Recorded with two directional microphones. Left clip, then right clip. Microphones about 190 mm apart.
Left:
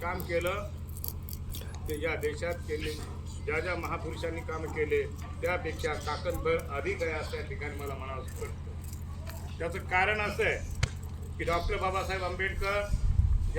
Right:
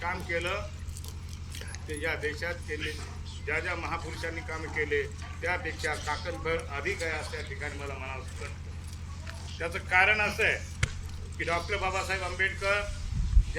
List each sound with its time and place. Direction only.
0.0 s speech: centre (ahead or behind)
1.9 s speech: centre (ahead or behind)
9.6 s speech: centre (ahead or behind)
10.8 s basketball bounce: 50° right (ahead or behind)
11.3 s speech: centre (ahead or behind)